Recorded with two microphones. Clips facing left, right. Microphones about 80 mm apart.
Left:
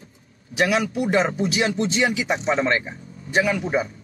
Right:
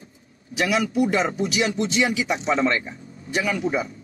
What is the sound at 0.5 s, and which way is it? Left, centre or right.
A man's voice, left.